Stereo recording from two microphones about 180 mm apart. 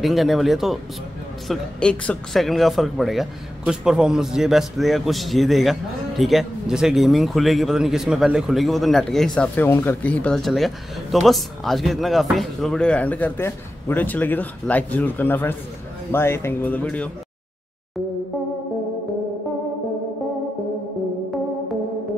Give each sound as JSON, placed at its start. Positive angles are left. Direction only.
{"t": 0.0, "sound": "speech", "side_deg": 0}